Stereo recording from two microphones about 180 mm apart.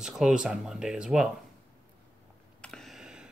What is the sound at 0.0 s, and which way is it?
Speech, 5° right (ahead or behind).